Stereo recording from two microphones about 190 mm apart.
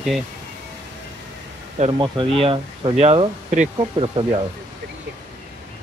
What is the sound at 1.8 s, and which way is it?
Speech, 25° right (ahead or behind).